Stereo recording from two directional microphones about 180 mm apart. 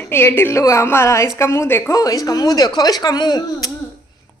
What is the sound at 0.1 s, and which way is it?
A woman's voice, 10° left (ahead or behind).